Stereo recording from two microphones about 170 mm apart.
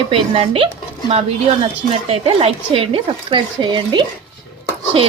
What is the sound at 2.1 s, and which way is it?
Speech, 35° right (ahead or behind).